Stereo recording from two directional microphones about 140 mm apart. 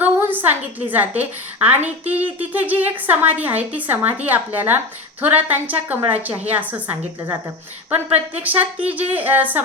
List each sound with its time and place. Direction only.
0.0 s a woman's voice: 15° right (ahead or behind)
7.2 s a woman's voice: 25° right (ahead or behind)
7.9 s speech: 10° right (ahead or behind)